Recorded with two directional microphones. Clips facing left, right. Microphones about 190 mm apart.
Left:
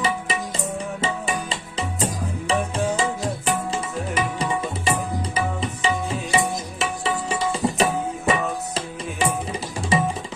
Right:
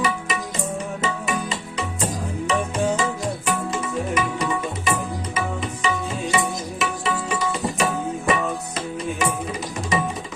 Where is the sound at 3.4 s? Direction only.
30° left (ahead or behind).